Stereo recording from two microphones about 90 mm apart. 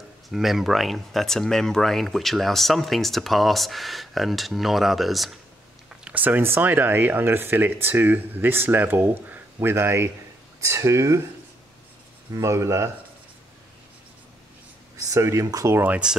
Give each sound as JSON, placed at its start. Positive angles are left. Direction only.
{"t": 0.3, "sound": "speech", "side_deg": -5}
{"t": 6.0, "sound": "speech", "side_deg": -20}
{"t": 12.4, "sound": "speech", "side_deg": -35}
{"t": 15.0, "sound": "speech", "side_deg": -35}
{"t": 15.9, "sound": "speech", "side_deg": -10}